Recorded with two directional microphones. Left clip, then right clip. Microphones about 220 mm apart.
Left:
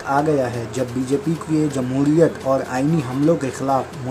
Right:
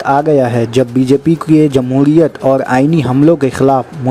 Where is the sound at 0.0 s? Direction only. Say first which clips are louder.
Right 8 dB; 35° right (ahead or behind).